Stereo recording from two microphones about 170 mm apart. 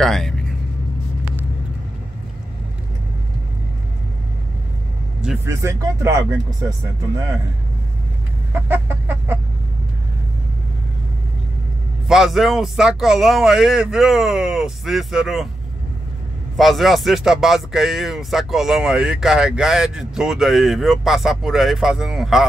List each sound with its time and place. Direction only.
0.0 s speech: centre (ahead or behind)
5.4 s speech: 15° right (ahead or behind)
8.6 s speech: 15° right (ahead or behind)
12.1 s speech: centre (ahead or behind)
16.5 s speech: centre (ahead or behind)